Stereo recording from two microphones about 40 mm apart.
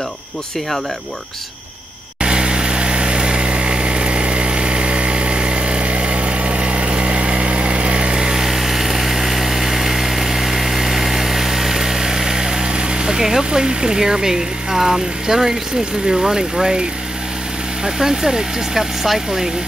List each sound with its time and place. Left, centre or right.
2.2 s vehicle: right
8.5 s vehicle: centre
16.1 s speech: centre
17.8 s speech: centre